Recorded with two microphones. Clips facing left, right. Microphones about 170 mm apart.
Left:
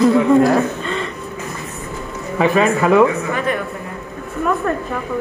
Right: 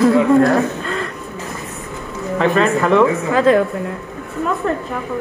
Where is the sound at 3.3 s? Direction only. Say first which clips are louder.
Right 8 dB; 90° right.